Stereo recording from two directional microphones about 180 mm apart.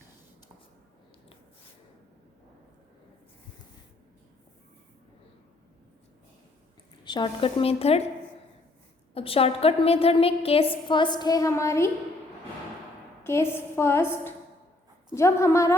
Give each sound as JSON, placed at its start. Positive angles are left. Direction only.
{"t": 7.0, "sound": "a woman's voice", "side_deg": 25}
{"t": 9.1, "sound": "a woman's voice", "side_deg": 30}
{"t": 13.2, "sound": "a woman's voice", "side_deg": 15}